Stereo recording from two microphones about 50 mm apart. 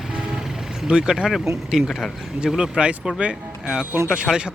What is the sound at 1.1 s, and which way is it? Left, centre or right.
Speech, centre.